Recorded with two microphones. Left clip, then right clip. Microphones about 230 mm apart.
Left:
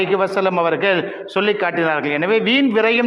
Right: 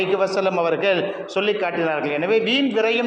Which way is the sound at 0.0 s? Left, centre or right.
Left.